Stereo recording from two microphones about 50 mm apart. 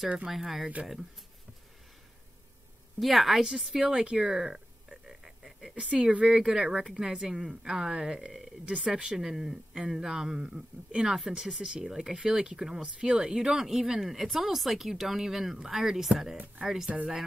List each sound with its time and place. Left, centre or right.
0.3 s a woman's voice: centre
3.0 s a woman's voice: centre
3.7 s a sound: centre
5.8 s speech: right
6.2 s speech: centre